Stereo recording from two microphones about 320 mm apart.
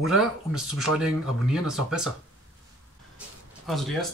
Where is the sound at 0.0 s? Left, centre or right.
Centre.